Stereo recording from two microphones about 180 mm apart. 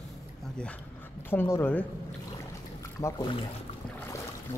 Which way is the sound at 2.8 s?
15° left (ahead or behind).